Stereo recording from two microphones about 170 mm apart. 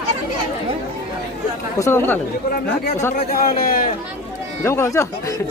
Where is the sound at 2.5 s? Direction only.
60° left (ahead or behind).